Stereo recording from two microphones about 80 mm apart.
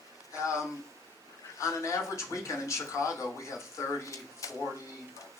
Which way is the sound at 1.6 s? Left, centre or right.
Left.